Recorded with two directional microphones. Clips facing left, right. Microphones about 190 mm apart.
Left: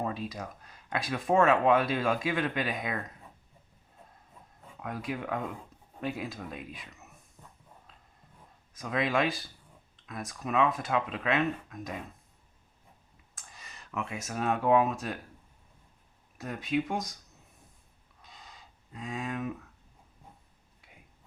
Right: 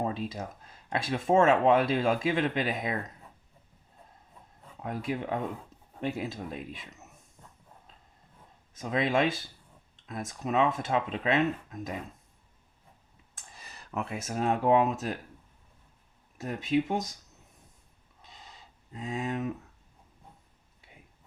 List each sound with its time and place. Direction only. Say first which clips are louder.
0.0 s speech: right 2 dB; 25° right (ahead or behind)
4.8 s speech: right 3 dB; 25° right (ahead or behind)
8.7 s speech: right 2 dB; 25° right (ahead or behind)
13.6 s a sound: right 2 dB; 35° right (ahead or behind)
14.3 s speech: right 1 dB; 25° right (ahead or behind)
16.4 s speech: right 3 dB; 25° right (ahead or behind)
18.9 s speech: right 3 dB; 30° right (ahead or behind)